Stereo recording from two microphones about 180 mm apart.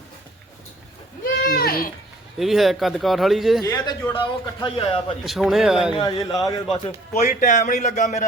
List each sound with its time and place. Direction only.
1.2 s goat: 60° left (ahead or behind)
2.4 s speech: centre (ahead or behind)
3.6 s a man's voice: 20° left (ahead or behind)
5.2 s speech: centre (ahead or behind)
5.9 s a man's voice: 25° left (ahead or behind)
7.1 s speech: 45° left (ahead or behind)